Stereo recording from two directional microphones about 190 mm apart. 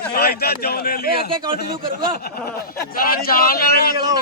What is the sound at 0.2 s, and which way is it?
A man's voice, 55° left (ahead or behind).